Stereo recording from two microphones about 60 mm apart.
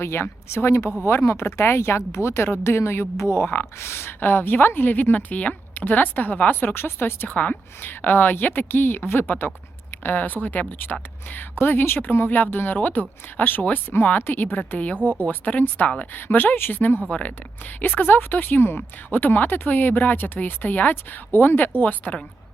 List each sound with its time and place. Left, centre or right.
0.0 s a woman's voice: left
14.9 s a woman's voice: right
15.2 s a woman's voice: left
17.1 s speech: left
17.7 s a woman's voice: left